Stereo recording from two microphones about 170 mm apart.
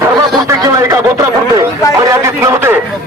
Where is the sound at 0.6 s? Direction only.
20° right (ahead or behind).